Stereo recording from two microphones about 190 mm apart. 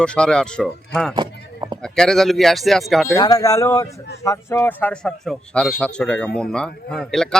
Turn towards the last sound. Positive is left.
turn(degrees=5)  # may be behind; listen again after turning